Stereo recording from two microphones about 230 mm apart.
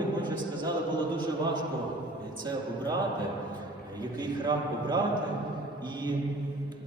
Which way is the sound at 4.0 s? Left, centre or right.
Centre.